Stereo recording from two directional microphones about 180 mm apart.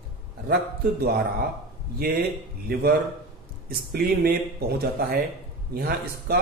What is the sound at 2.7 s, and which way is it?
Speech, 60° right (ahead or behind).